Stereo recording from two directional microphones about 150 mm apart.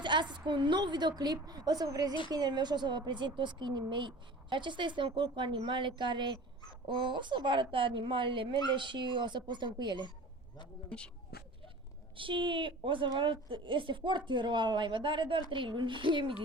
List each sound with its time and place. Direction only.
0.0 s a woman's voice: 30° right (ahead or behind)
10.8 s speech: 5° left (ahead or behind)
12.1 s speech: 35° right (ahead or behind)